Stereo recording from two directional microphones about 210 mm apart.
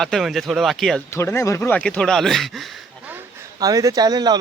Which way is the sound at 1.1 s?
15° left (ahead or behind).